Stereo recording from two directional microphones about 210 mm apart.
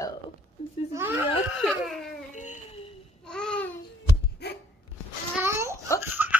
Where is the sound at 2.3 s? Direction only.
35° left (ahead or behind).